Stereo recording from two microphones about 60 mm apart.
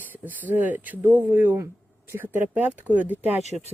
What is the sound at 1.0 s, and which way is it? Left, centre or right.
Speech, right.